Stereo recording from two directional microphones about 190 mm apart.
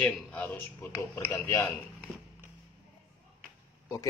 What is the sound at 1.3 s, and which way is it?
Speech, 15° left (ahead or behind).